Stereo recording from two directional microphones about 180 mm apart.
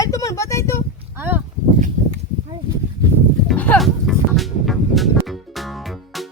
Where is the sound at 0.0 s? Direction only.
20° left (ahead or behind).